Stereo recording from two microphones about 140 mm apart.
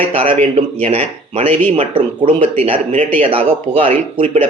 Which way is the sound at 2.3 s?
60° right (ahead or behind).